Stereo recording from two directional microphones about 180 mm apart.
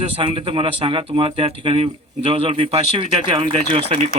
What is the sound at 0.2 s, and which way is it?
Speech, 30° right (ahead or behind).